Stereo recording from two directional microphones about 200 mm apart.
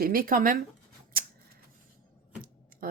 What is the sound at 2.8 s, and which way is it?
Tick-tock, 45° right (ahead or behind).